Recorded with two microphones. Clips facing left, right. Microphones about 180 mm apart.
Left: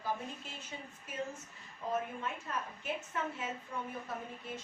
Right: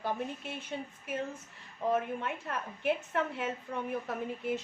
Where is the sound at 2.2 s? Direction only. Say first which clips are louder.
Right 3 dB; 65° right (ahead or behind).